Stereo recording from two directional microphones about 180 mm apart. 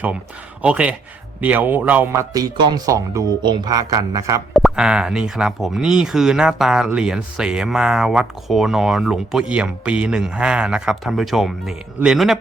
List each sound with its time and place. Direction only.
0.6 s speech: 5° right (ahead or behind)
4.5 s speech: centre (ahead or behind)